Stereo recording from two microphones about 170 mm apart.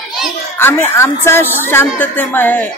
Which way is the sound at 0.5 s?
10° left (ahead or behind).